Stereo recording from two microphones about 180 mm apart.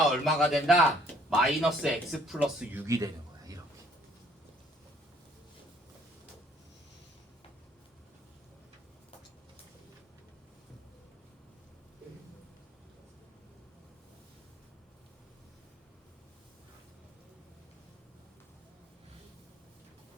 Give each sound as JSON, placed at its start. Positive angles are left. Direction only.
{"t": 0.1, "sound": "speech", "side_deg": 0}
{"t": 2.8, "sound": "a man's voice", "side_deg": -15}